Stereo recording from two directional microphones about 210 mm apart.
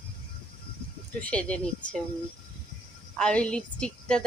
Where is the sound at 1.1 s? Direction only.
5° left (ahead or behind).